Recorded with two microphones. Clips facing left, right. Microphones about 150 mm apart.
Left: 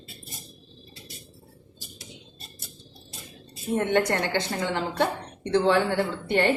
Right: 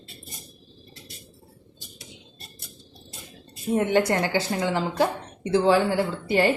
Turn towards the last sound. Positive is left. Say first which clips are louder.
# right 2 dB
turn(degrees=-5)  # may be behind; listen again after turning